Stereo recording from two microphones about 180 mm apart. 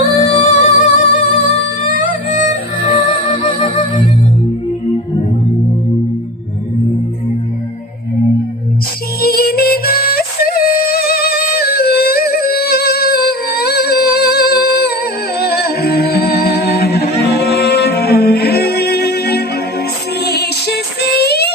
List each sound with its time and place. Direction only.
0.0 s music: 45° left (ahead or behind)
3.0 s music: 30° left (ahead or behind)
9.2 s music: 60° left (ahead or behind)